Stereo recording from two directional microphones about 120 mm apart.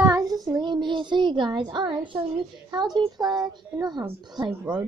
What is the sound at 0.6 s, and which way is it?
A woman's voice, 40° right (ahead or behind).